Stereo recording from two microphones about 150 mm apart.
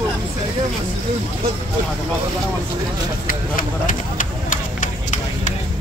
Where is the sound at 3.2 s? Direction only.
65° left (ahead or behind).